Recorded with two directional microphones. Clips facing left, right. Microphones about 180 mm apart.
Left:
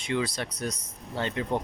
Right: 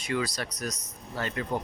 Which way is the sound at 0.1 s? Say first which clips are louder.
Left 1 dB; 25° left (ahead or behind).